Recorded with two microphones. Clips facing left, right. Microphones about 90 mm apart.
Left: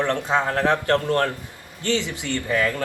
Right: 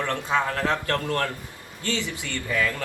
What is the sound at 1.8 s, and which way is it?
Speech, 20° left (ahead or behind).